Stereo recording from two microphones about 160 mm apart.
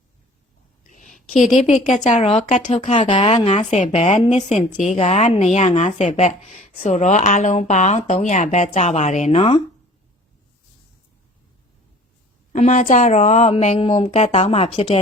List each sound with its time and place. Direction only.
0.9 s a sound: 50° left (ahead or behind)
1.6 s speech: centre (ahead or behind)
2.0 s speech: 40° left (ahead or behind)
3.1 s speech: 30° left (ahead or behind)
12.5 s speech: 50° left (ahead or behind)